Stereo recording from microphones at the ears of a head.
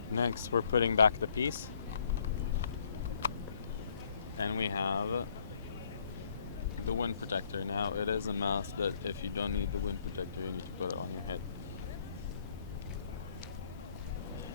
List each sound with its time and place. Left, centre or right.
0.1 s speech: left
4.4 s speech: left
6.8 s speech: left